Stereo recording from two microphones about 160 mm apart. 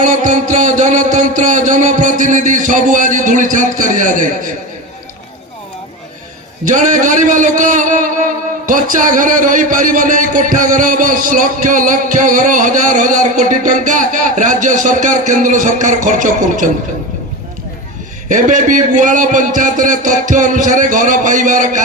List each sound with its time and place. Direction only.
0.0 s a man's voice: 50° right (ahead or behind)
6.7 s a man's voice: 50° right (ahead or behind)
18.3 s a man's voice: 55° right (ahead or behind)